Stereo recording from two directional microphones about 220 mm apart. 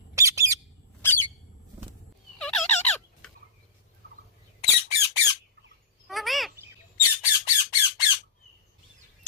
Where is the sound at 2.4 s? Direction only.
5° left (ahead or behind).